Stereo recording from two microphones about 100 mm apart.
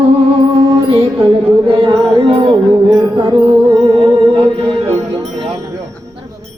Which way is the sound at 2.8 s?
30° right (ahead or behind).